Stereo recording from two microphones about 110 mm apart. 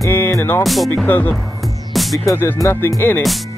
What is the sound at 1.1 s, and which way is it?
Speech, 15° left (ahead or behind).